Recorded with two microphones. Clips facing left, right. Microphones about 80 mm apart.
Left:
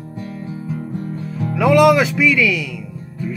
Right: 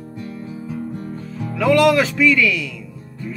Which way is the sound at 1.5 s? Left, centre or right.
Centre.